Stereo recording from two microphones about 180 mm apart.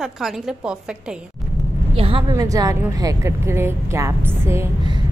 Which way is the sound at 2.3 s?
20° right (ahead or behind).